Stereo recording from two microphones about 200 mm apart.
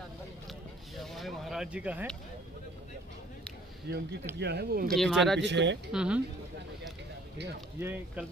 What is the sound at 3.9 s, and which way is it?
Speech, 55° right (ahead or behind).